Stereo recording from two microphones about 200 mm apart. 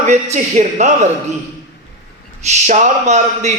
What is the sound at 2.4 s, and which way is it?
A man's voice, 35° right (ahead or behind).